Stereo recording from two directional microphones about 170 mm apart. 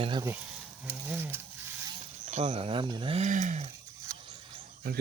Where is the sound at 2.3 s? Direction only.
40° right (ahead or behind).